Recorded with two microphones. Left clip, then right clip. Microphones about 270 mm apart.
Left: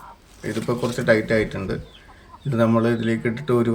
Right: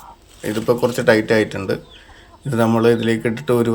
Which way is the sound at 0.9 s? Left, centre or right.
Centre.